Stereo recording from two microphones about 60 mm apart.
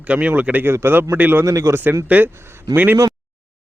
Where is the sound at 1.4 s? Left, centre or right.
Right.